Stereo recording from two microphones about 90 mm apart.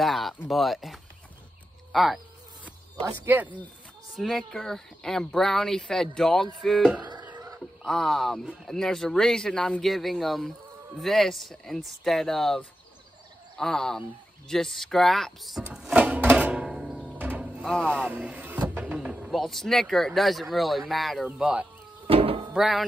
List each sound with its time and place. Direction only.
0.0 s a sound: centre (ahead or behind)
0.5 s speech: centre (ahead or behind)
2.6 s speech: 20° right (ahead or behind)
4.1 s speech: centre (ahead or behind)
7.0 s a sound: 50° right (ahead or behind)
7.3 s wild animals: 40° right (ahead or behind)
7.8 s speech: 5° left (ahead or behind)
15.7 s music: 10° right (ahead or behind)
17.8 s speech: 15° right (ahead or behind)
18.5 s vehicle: 15° right (ahead or behind)
19.3 s speech: 5° left (ahead or behind)
22.0 s a sound: 90° right
22.5 s speech: 5° right (ahead or behind)